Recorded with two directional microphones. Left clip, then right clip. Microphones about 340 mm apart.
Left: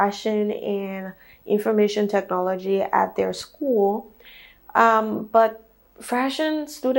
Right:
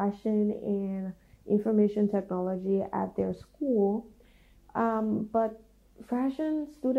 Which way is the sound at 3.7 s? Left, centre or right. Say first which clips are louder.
Left 7 dB; left.